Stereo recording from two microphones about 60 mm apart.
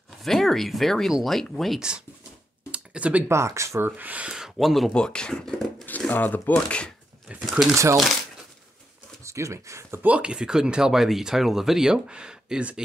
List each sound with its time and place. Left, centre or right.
0.2 s speech: centre
1.8 s speech: centre
2.7 s a sound: right
3.3 s speech: right
3.8 s speech: right
4.3 s speech: centre
4.9 s speech: centre
5.3 s speech: centre
5.9 s speech: left
7.4 s speech: centre
7.7 s speech: right
9.2 s speech: right
10.0 s speech: centre